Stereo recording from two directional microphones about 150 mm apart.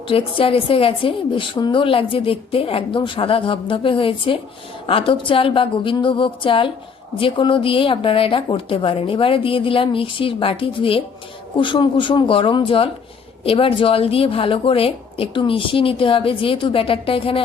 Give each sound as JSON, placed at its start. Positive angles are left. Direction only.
{"t": 0.1, "sound": "a woman's voice", "side_deg": 35}